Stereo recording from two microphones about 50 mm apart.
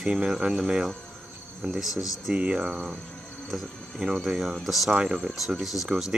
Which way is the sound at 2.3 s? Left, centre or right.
Right.